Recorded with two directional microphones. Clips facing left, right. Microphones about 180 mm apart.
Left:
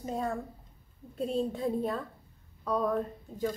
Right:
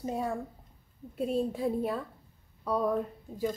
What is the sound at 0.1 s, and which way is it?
A woman's voice, 10° right (ahead or behind).